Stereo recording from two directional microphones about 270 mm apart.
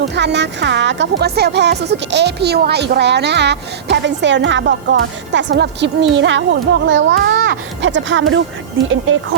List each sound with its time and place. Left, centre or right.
0.0 s speech: right